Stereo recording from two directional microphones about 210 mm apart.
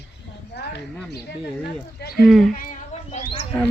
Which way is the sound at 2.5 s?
40° left (ahead or behind).